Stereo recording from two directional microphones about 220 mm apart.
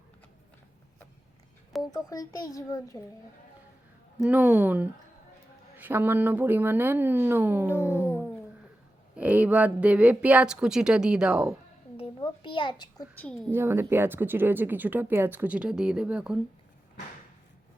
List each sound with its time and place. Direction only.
1.8 s a child's voice: 15° left (ahead or behind)
4.2 s speech: 5° right (ahead or behind)
7.7 s a child's voice: 10° left (ahead or behind)
9.1 s a woman's voice: 5° right (ahead or behind)
11.9 s a sound: 20° left (ahead or behind)
13.2 s a woman's voice: 5° left (ahead or behind)
13.5 s speech: 10° right (ahead or behind)